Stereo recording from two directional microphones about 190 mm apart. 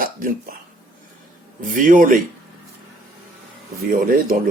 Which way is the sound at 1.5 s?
45° right (ahead or behind).